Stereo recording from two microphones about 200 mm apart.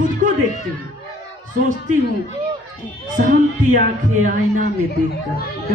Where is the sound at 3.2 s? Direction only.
45° right (ahead or behind).